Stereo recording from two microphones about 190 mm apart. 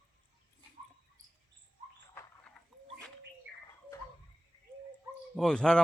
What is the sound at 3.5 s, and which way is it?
Bird, 70° right (ahead or behind).